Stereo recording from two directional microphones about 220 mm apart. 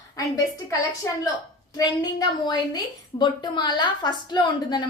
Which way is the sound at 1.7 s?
15° left (ahead or behind).